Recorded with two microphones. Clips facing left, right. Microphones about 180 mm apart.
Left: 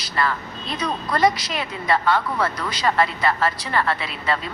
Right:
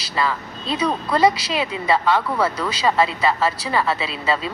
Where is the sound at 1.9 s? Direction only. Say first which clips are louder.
Right 1 dB; 10° right (ahead or behind).